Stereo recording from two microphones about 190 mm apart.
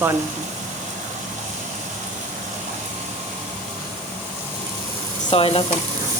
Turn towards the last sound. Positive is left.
turn(degrees=30)  # may be behind; listen again after turning